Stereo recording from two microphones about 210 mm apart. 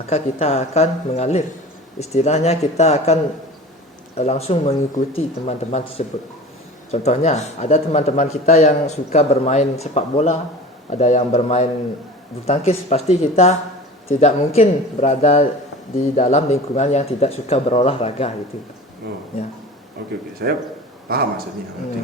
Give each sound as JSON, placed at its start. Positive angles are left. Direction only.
{"t": 0.1, "sound": "a man's voice", "side_deg": 30}
{"t": 20.0, "sound": "speech", "side_deg": -50}